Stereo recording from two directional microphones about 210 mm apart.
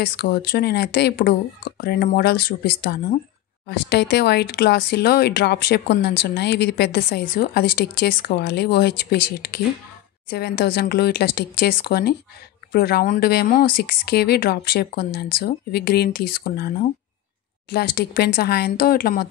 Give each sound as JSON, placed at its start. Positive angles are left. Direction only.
{"t": 0.0, "sound": "speech", "side_deg": 50}